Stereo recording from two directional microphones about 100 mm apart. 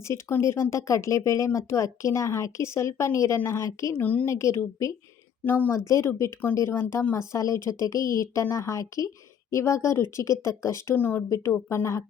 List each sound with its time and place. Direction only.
0.1 s a woman's voice: 30° left (ahead or behind)
4.0 s a woman's voice: 15° left (ahead or behind)
4.3 s a woman's voice: 30° left (ahead or behind)
5.5 s a woman's voice: 15° left (ahead or behind)
5.9 s a woman's voice: 30° left (ahead or behind)
7.2 s a woman's voice: 30° left (ahead or behind)
10.9 s a woman's voice: 20° left (ahead or behind)
11.7 s a woman's voice: 30° left (ahead or behind)